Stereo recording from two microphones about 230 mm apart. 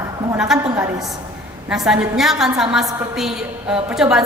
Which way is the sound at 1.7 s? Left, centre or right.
Centre.